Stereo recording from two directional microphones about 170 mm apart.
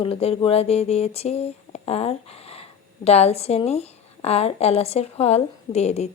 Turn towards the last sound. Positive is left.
turn(degrees=40)  # may be behind; listen again after turning